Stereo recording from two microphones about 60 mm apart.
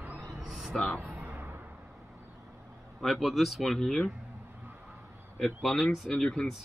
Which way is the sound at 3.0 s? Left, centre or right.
Centre.